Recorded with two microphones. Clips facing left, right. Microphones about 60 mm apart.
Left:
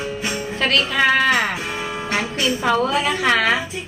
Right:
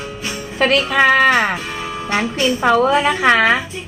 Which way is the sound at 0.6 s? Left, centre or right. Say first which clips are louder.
Right 5 dB; right.